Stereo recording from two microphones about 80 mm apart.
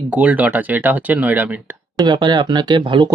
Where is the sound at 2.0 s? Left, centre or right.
Right.